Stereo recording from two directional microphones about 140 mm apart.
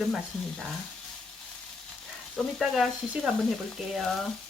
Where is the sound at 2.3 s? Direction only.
Centre (ahead or behind).